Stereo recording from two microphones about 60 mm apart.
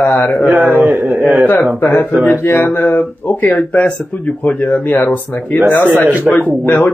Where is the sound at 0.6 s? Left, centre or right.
Right.